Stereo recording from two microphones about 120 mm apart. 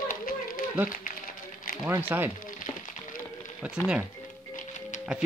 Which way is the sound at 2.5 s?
90° left.